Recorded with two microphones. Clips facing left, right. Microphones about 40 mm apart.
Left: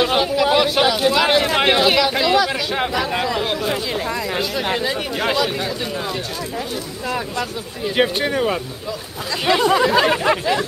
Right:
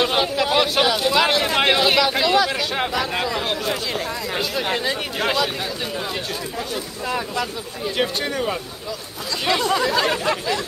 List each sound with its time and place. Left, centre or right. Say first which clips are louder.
0.0 s a sound: left 3 dB; centre
0.6 s speech: left 2 dB; centre
7.1 s speech: left 1 dB; centre
7.9 s speech: left 5 dB; centre